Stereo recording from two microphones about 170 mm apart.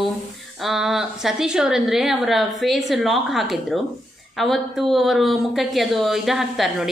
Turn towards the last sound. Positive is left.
turn(degrees=0)  # may be behind; listen again after turning